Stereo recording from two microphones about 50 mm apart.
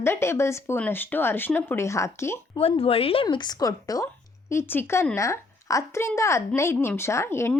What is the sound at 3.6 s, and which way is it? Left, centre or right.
Speech, left.